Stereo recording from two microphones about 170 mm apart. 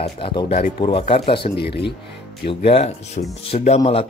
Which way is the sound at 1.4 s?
70° left (ahead or behind).